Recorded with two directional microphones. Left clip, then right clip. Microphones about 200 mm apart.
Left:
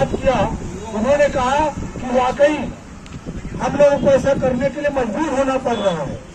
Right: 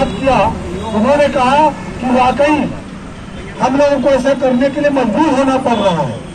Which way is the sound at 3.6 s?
30° left (ahead or behind).